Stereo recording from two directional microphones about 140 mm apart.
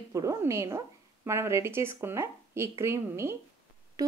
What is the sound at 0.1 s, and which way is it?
A woman's voice, 25° right (ahead or behind).